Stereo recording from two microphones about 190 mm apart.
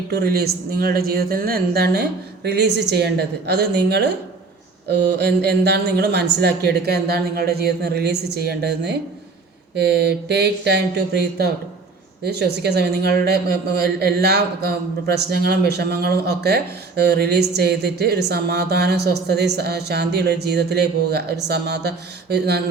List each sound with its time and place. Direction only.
0.1 s a woman's voice: 55° right (ahead or behind)